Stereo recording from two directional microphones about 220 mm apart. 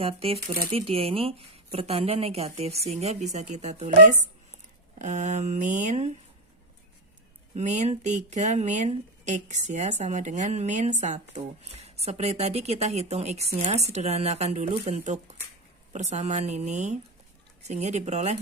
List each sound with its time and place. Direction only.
0.0 s a woman's voice: 25° right (ahead or behind)
0.3 s speech: 45° right (ahead or behind)
0.7 s a woman's voice: 25° right (ahead or behind)
7.5 s a woman's voice: 35° right (ahead or behind)